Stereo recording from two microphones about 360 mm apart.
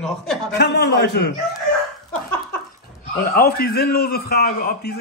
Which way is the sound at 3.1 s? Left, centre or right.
Left.